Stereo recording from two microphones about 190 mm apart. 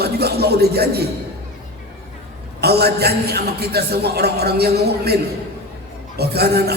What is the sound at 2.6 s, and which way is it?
A man's voice, 55° right (ahead or behind).